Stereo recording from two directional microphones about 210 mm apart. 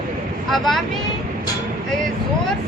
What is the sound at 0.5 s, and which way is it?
Speech, centre (ahead or behind).